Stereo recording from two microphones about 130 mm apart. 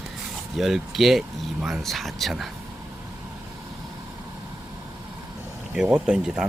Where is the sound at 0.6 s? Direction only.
Centre (ahead or behind).